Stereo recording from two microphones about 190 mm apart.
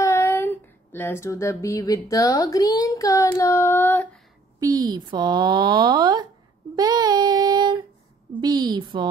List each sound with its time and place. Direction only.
0.0 s speech: 15° left (ahead or behind)
4.6 s speech: 20° right (ahead or behind)
6.7 s child singing: 20° right (ahead or behind)
8.4 s speech: 20° right (ahead or behind)